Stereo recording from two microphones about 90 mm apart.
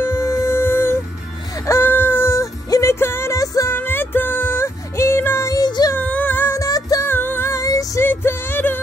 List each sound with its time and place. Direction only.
0.0 s music: 30° left (ahead or behind)
1.7 s a sound: 25° left (ahead or behind)
2.7 s music: 35° left (ahead or behind)
3.7 s music: 25° left (ahead or behind)
5.5 s child singing: 45° left (ahead or behind)
5.9 s music: 15° left (ahead or behind)
6.6 s music: 40° left (ahead or behind)
7.1 s music: 20° left (ahead or behind); by 8.0 s 40° left (ahead or behind)
8.0 s music: 25° left (ahead or behind)